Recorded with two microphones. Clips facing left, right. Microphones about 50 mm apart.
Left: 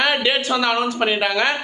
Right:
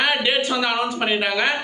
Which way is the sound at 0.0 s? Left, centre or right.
Centre.